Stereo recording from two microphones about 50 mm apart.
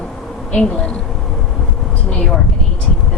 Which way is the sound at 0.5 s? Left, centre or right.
Centre.